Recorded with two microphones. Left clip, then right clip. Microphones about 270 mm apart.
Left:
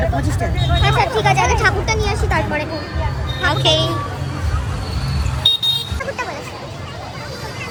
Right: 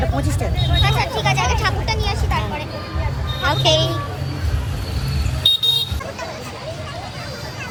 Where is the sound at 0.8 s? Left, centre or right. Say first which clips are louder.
Left 4 dB; left.